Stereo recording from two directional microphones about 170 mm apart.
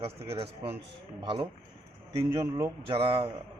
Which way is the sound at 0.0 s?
35° right (ahead or behind).